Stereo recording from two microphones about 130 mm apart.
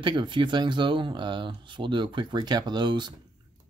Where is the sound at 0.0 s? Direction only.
35° right (ahead or behind).